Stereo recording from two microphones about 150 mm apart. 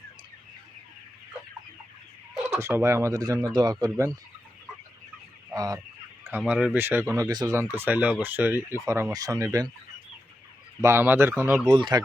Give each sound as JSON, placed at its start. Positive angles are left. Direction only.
{"t": 2.6, "sound": "speech", "side_deg": -20}
{"t": 5.5, "sound": "fowl", "side_deg": -25}
{"t": 6.2, "sound": "speech", "side_deg": -10}
{"t": 7.5, "sound": "speech", "side_deg": -15}
{"t": 10.8, "sound": "speech", "side_deg": -20}
{"t": 11.7, "sound": "speech", "side_deg": -30}